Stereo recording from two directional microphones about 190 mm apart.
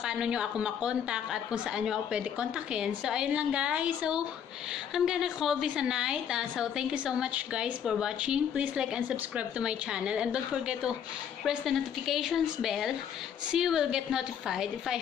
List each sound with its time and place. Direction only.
0.0 s a woman's voice: 5° right (ahead or behind)